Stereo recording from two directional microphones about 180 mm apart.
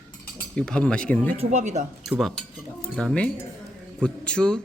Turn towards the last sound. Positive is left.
turn(degrees=5)  # may be behind; listen again after turning